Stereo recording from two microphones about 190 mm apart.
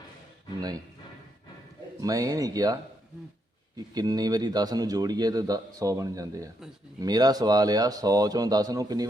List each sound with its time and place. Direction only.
2.0 s a man's voice: 20° right (ahead or behind)
3.8 s a man's voice: 20° right (ahead or behind)